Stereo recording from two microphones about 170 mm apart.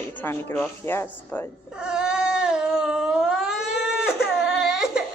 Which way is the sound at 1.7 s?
5° right (ahead or behind).